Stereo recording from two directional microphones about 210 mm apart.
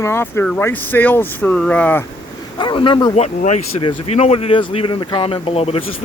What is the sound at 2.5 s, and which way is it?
Speech, 20° left (ahead or behind).